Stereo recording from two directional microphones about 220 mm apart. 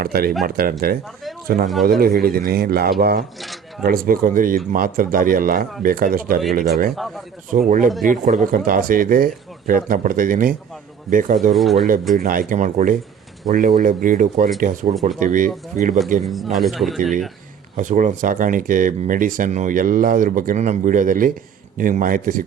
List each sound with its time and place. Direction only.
0.0 s speech: 45° right (ahead or behind)
3.4 s a sound: centre (ahead or behind)
3.8 s speech: 40° right (ahead or behind)
11.5 s speech: centre (ahead or behind)
12.1 s speech: 40° right (ahead or behind)
16.2 s speech: centre (ahead or behind)
17.7 s speech: 35° right (ahead or behind)